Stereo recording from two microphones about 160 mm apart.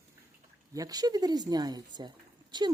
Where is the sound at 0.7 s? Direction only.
25° right (ahead or behind).